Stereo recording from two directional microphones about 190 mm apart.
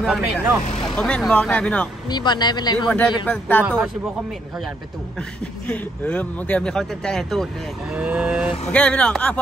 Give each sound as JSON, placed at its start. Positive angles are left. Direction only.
{"t": 0.0, "sound": "speech", "side_deg": 0}
{"t": 2.0, "sound": "speech", "side_deg": 20}
{"t": 3.3, "sound": "speech", "side_deg": 10}
{"t": 3.6, "sound": "speech", "side_deg": -10}
{"t": 5.7, "sound": "speech", "side_deg": 5}
{"t": 8.7, "sound": "speech", "side_deg": 5}